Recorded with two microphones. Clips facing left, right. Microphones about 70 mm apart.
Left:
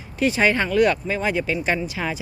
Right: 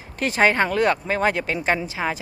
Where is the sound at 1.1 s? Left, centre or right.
Right.